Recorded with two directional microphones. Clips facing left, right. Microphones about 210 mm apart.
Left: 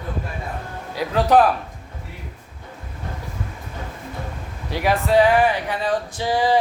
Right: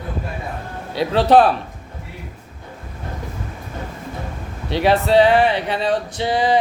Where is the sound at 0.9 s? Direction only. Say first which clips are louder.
Right 3 dB; 30° right (ahead or behind).